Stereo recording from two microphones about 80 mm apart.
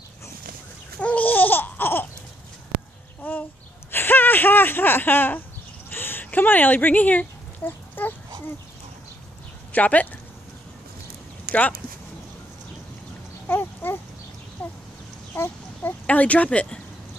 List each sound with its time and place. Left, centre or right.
1.0 s babbling: centre
3.2 s a sound: left
9.7 s speech: centre
13.5 s a sound: left
15.3 s chicken: left
16.1 s speech: centre